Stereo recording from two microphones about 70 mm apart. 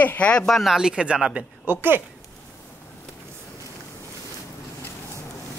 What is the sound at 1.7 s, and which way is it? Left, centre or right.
Speech, right.